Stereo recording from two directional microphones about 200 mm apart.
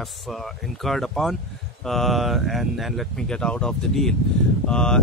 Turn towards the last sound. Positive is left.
turn(degrees=5)  # may be behind; listen again after turning